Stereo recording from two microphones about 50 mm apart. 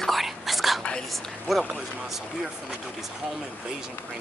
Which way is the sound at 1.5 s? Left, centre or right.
Centre.